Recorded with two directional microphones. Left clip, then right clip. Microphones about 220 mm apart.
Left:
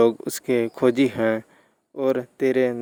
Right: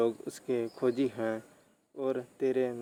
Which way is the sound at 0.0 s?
45° left (ahead or behind).